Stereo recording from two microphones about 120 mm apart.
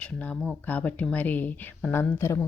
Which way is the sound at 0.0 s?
10° left (ahead or behind).